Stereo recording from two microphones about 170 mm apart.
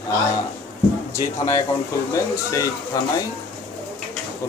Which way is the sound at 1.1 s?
20° left (ahead or behind).